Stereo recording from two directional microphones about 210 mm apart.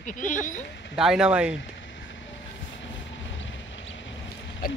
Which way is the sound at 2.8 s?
60° left (ahead or behind).